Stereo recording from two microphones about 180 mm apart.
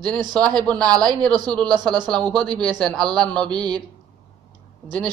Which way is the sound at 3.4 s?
25° right (ahead or behind).